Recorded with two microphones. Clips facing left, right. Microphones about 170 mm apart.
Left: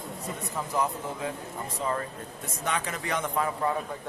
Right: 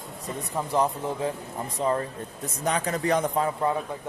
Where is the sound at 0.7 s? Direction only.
30° right (ahead or behind).